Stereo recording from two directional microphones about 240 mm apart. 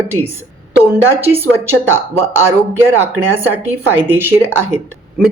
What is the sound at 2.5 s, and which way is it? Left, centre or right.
A woman's voice, centre.